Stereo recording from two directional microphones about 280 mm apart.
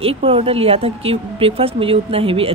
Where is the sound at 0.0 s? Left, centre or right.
Centre.